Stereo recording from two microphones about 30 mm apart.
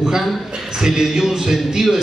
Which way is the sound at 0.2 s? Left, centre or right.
Centre.